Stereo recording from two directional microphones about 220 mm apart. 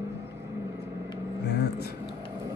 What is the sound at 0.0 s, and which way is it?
Vehicle, 15° right (ahead or behind).